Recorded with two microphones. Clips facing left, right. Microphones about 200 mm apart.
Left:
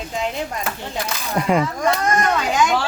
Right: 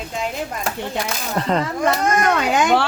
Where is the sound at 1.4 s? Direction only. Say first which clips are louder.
Left 2 dB; 10° left (ahead or behind).